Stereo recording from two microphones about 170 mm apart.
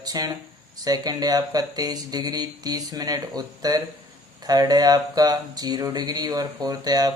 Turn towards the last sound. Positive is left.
turn(degrees=-20)  # may be behind; listen again after turning